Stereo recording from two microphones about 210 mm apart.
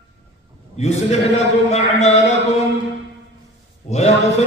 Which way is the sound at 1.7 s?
30° left (ahead or behind).